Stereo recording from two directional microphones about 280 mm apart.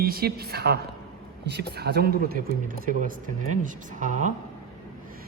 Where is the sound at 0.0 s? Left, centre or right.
Right.